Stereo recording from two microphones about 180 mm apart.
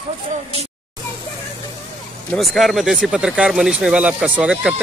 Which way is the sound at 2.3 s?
Centre (ahead or behind).